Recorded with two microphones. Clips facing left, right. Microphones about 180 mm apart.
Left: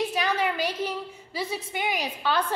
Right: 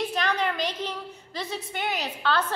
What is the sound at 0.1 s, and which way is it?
A woman's voice, 10° left (ahead or behind).